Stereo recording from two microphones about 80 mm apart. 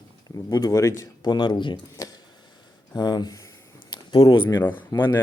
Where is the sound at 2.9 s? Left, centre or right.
Left.